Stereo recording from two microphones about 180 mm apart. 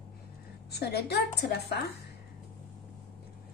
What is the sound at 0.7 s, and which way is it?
Speech, 65° left (ahead or behind).